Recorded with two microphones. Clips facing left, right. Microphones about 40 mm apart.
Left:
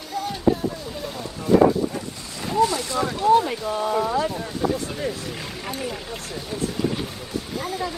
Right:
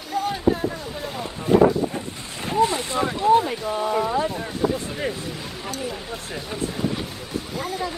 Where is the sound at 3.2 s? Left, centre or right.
Centre.